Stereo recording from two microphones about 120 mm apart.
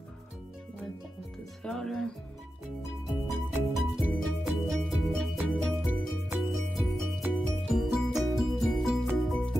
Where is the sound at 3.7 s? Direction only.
Centre (ahead or behind).